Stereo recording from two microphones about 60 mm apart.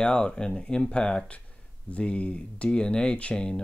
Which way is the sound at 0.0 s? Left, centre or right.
Centre.